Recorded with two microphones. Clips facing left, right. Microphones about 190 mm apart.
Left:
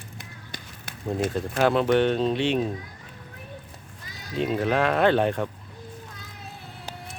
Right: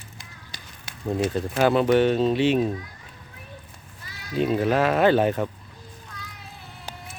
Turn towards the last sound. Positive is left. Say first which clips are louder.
# right 2 dB
turn(degrees=-5)  # may be behind; listen again after turning